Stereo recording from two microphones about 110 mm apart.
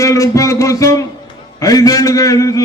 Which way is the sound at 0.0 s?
30° left (ahead or behind).